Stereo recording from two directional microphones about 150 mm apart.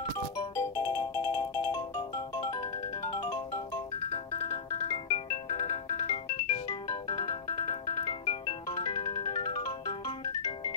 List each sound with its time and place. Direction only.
0.6 s music: 20° left (ahead or behind)
8.6 s music: 20° left (ahead or behind)